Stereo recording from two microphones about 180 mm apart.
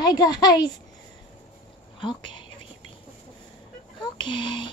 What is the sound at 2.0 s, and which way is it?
Speech, 25° left (ahead or behind).